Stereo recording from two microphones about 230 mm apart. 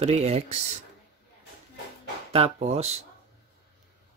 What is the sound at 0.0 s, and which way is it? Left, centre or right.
Speech, right.